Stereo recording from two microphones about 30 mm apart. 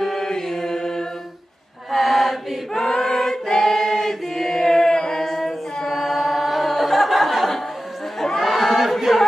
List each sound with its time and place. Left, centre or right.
0.0 s chant: centre
1.9 s chant: centre
2.7 s choir: centre
4.9 s a sound: centre
5.9 s a capella: centre
8.4 s a sound: centre